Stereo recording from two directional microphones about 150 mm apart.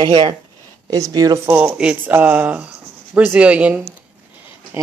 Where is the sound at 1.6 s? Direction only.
10° right (ahead or behind).